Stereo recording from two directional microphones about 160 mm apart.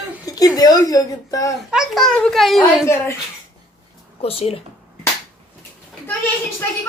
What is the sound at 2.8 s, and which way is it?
Speech, 15° left (ahead or behind).